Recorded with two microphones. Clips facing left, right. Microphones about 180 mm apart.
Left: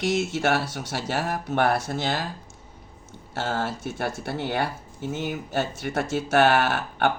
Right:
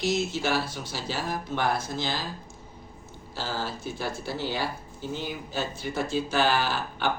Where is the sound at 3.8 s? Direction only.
65° left (ahead or behind).